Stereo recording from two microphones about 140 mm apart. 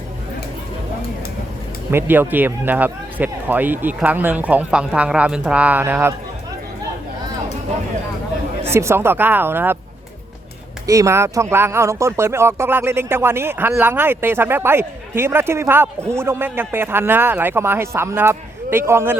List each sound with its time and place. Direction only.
1.9 s speech: 15° right (ahead or behind)
8.6 s speech: 20° right (ahead or behind)
10.8 s speech: 20° right (ahead or behind)